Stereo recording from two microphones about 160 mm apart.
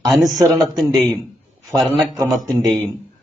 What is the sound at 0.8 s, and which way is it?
Speech, centre (ahead or behind).